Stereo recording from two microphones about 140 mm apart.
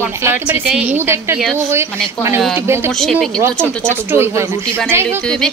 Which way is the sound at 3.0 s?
Centre (ahead or behind).